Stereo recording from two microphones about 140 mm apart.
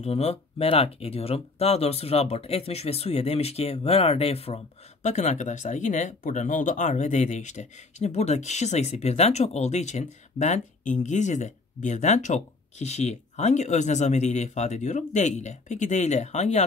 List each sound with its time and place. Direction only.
0.0 s speech: 50° left (ahead or behind)
5.0 s speech: 55° left (ahead or behind)